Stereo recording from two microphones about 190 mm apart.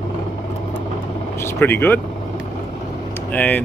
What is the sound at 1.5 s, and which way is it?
Speech, 10° left (ahead or behind).